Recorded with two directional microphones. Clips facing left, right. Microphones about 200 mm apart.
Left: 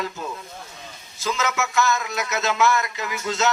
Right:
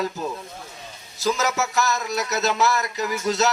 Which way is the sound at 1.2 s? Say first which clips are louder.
Right 2 dB; 40° right (ahead or behind).